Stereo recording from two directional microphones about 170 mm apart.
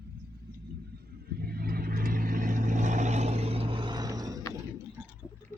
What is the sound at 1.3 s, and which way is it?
Vehicle, 65° right (ahead or behind).